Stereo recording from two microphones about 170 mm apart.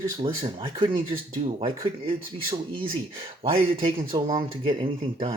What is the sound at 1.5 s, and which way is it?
Speech, 35° right (ahead or behind).